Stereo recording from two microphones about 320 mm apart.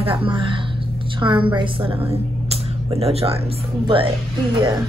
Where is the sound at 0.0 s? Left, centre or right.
Centre.